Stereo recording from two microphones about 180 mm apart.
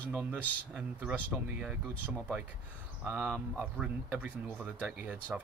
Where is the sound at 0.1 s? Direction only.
10° right (ahead or behind).